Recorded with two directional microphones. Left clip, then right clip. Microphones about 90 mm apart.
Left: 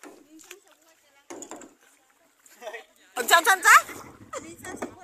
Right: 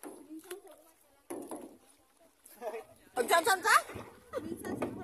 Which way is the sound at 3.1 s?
20° left (ahead or behind).